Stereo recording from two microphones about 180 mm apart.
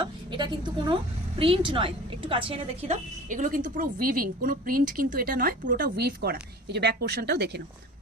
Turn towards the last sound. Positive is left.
turn(degrees=-65)  # may be behind; listen again after turning